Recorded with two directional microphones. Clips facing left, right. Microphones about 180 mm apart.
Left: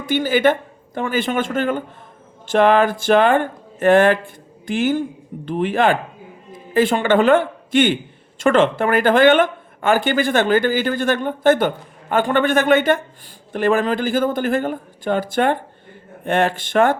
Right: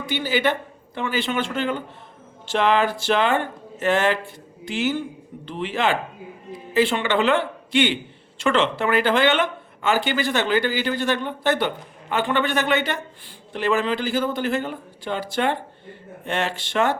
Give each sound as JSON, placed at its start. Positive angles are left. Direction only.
{"t": 0.0, "sound": "speech", "side_deg": 50}